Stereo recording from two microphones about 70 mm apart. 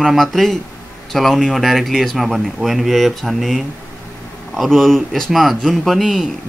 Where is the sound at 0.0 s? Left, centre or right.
Centre.